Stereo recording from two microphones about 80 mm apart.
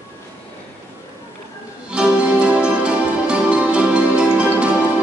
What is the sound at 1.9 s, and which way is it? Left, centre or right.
Music, centre.